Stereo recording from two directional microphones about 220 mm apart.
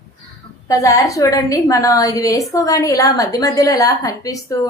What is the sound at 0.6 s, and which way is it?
A woman's voice, 15° left (ahead or behind).